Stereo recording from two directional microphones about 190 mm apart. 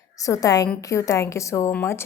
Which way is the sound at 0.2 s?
20° left (ahead or behind).